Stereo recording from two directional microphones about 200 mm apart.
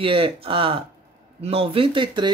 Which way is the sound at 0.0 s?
25° right (ahead or behind).